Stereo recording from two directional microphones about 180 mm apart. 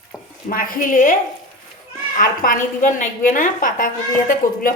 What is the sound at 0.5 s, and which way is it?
Speech, 50° left (ahead or behind).